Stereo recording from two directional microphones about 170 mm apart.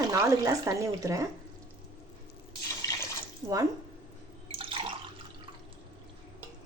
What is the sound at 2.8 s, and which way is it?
Water, 20° left (ahead or behind).